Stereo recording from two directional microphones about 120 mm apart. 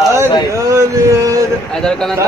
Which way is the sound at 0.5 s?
25° right (ahead or behind).